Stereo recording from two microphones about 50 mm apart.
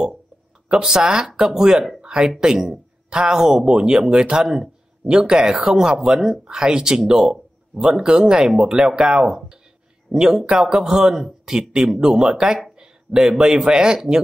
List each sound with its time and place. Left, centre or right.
0.7 s speech: centre
12.7 s a sound: centre
13.7 s speech: centre